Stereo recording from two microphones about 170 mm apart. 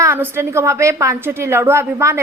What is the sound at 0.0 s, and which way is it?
A woman's voice, 15° right (ahead or behind).